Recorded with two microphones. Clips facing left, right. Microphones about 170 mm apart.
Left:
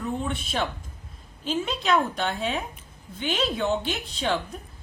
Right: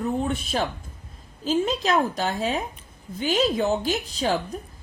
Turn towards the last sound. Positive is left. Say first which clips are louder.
# right 3 dB
turn(degrees=-40)  # may be behind; listen again after turning